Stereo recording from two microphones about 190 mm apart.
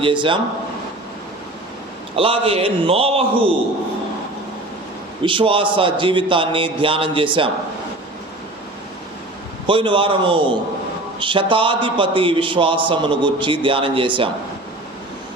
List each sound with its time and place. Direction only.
0.0 s a man's voice: 25° right (ahead or behind)
2.1 s a man's voice: 30° right (ahead or behind)
5.2 s a man's voice: 25° right (ahead or behind)
9.6 s a man's voice: 25° right (ahead or behind)